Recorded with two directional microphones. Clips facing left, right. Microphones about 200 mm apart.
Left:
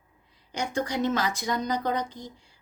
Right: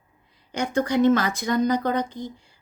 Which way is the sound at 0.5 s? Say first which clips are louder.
Right 6 dB; 55° right (ahead or behind).